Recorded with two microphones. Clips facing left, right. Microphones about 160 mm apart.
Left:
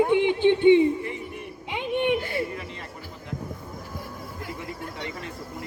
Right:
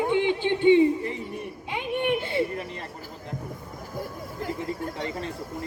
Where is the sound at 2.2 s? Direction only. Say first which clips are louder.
Right 2 dB; 25° right (ahead or behind).